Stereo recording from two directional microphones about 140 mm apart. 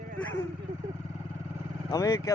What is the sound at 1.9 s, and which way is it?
Speech, 25° left (ahead or behind).